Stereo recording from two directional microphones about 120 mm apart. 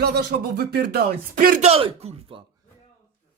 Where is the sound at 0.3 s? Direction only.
90° right.